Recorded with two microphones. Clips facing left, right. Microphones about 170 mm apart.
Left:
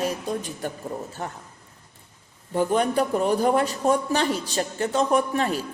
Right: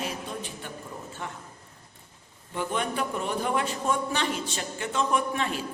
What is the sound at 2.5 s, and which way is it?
Speech, 40° left (ahead or behind).